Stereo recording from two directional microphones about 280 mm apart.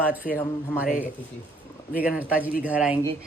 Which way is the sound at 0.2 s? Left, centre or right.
Left.